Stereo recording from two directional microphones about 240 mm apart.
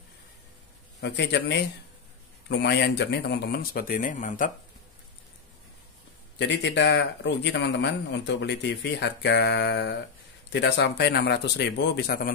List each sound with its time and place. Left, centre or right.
1.0 s speech: left
6.3 s speech: left